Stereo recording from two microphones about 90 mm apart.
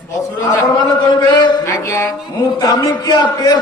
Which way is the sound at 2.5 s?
45° left (ahead or behind).